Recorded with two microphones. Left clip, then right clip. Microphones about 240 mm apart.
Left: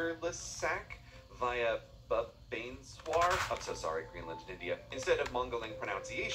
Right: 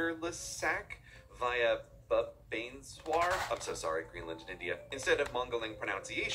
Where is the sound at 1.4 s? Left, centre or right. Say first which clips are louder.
Right 2 dB; centre.